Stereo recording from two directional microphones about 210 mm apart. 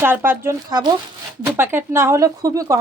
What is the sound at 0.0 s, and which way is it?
Speech, 10° right (ahead or behind).